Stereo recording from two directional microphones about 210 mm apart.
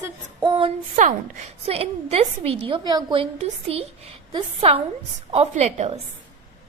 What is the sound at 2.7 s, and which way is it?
A woman's voice, 20° right (ahead or behind).